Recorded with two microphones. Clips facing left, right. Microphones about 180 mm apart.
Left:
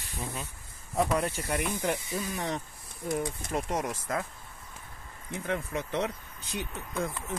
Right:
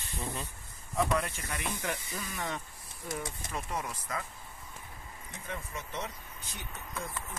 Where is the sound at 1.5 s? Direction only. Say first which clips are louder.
Left 6 dB; 40° left (ahead or behind).